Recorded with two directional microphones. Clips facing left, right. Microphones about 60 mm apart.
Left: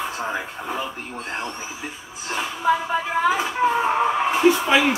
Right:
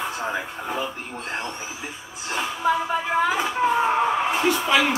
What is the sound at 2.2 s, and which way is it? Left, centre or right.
Speech, centre.